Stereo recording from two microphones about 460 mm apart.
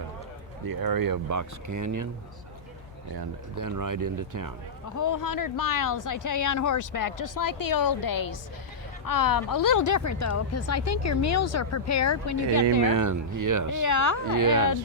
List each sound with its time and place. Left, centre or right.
0.7 s speech: right
3.2 s speech: right
4.9 s speech: left
12.9 s speech: right
13.7 s speech: left
14.3 s speech: right